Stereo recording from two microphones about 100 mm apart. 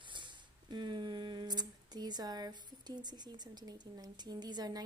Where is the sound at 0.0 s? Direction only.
55° right (ahead or behind).